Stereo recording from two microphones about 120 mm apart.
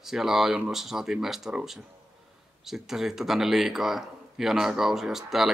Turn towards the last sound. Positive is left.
turn(degrees=0)  # may be behind; listen again after turning